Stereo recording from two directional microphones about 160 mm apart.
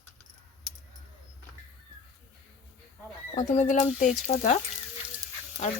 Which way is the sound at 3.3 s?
50° left (ahead or behind).